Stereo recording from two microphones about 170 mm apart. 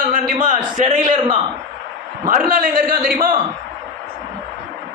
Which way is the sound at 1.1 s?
30° right (ahead or behind).